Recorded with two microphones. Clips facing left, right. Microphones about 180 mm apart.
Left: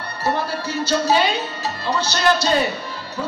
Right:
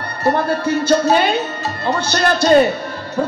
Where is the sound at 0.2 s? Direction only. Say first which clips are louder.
Right 6 dB; 55° right (ahead or behind).